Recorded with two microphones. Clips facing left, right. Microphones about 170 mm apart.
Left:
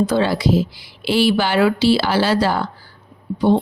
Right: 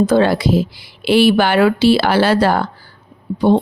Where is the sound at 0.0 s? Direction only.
55° right (ahead or behind).